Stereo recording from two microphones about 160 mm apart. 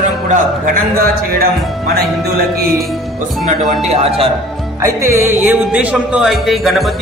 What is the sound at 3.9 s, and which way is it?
Speech, 40° right (ahead or behind).